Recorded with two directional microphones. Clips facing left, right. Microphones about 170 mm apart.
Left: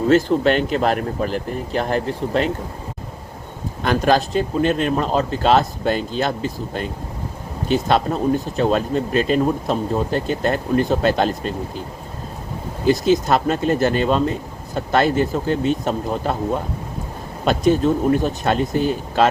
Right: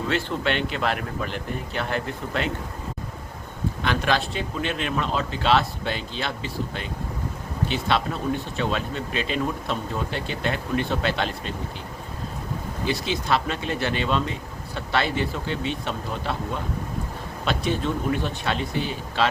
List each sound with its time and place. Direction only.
0.1 s speech: 40° left (ahead or behind)
3.8 s speech: 40° left (ahead or behind)
12.8 s speech: 45° left (ahead or behind)